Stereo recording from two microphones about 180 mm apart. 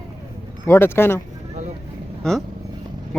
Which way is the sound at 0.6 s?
15° left (ahead or behind).